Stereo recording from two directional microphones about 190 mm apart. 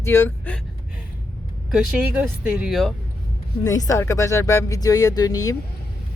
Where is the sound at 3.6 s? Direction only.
15° left (ahead or behind).